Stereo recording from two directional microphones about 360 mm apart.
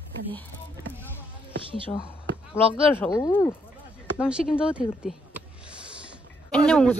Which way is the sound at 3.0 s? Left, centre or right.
Centre.